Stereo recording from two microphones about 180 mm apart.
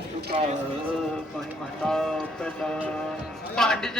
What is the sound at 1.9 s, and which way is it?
Speech, 5° left (ahead or behind).